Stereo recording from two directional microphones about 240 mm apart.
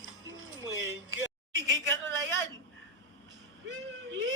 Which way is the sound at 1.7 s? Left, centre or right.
Right.